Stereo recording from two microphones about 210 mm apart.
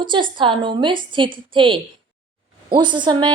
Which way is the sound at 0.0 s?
20° right (ahead or behind).